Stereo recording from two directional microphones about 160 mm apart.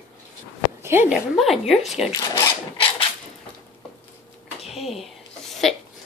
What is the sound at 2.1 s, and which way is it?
Speech, 20° left (ahead or behind).